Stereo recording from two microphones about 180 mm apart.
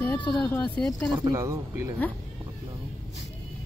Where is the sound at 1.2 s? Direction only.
20° right (ahead or behind).